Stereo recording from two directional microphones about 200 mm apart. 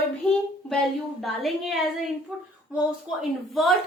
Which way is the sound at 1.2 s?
Centre (ahead or behind).